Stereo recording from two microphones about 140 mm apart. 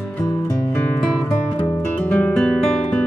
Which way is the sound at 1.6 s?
10° left (ahead or behind).